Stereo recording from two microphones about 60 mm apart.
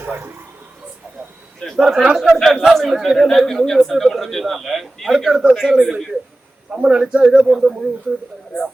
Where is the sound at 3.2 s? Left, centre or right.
Centre.